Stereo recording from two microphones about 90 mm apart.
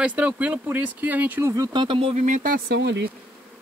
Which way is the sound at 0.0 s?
15° right (ahead or behind).